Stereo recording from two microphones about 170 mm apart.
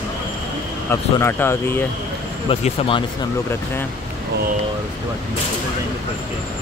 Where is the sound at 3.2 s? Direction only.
15° left (ahead or behind).